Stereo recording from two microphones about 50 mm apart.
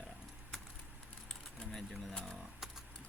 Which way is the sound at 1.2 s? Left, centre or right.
Centre.